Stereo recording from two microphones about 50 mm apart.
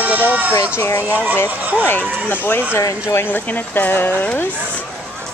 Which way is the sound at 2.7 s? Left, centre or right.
Left.